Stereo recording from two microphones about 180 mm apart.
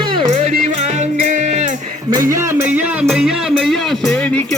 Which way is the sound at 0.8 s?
40° right (ahead or behind).